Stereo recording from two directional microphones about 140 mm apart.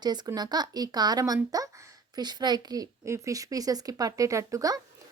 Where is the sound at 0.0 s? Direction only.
30° right (ahead or behind).